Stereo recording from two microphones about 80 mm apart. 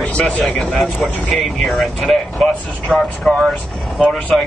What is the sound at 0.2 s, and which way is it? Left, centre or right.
Speech, centre.